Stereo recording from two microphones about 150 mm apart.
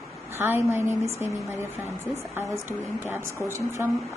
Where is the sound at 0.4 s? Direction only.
15° right (ahead or behind).